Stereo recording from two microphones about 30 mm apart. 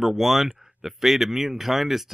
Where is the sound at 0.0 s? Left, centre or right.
Centre.